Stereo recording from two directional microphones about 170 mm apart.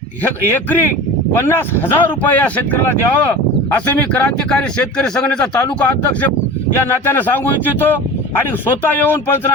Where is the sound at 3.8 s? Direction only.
10° left (ahead or behind).